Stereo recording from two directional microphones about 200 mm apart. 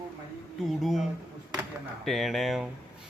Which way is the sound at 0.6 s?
Centre (ahead or behind).